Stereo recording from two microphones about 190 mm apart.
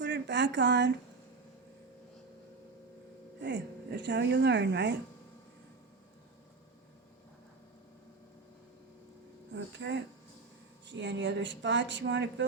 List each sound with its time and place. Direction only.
0.0 s a sound: 65° right (ahead or behind)
3.4 s speech: 65° right (ahead or behind)
9.5 s speech: 70° right (ahead or behind)